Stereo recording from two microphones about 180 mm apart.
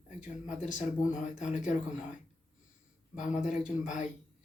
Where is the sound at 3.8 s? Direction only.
45° left (ahead or behind).